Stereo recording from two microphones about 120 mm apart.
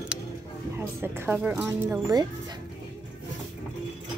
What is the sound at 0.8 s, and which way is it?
A woman's voice, 20° right (ahead or behind).